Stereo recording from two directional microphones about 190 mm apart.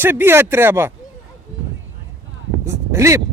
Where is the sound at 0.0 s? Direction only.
10° right (ahead or behind).